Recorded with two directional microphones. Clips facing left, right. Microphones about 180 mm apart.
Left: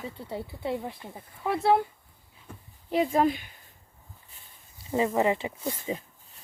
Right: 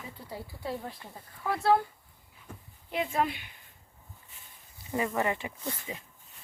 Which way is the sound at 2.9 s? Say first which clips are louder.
Left 6 dB; 40° left (ahead or behind).